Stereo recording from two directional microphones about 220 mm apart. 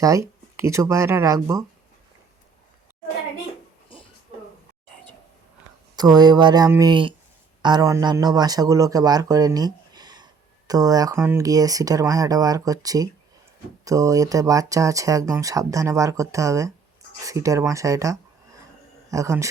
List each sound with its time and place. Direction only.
0.0 s speech: 15° right (ahead or behind)
6.0 s speech: 20° right (ahead or behind)